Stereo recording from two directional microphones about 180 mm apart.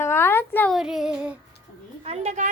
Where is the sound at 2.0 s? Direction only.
35° right (ahead or behind).